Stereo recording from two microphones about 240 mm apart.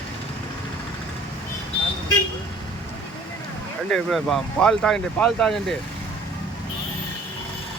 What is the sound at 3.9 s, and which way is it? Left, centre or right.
Speech, centre.